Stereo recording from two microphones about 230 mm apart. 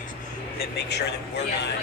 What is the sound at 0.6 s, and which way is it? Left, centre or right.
Speech, left.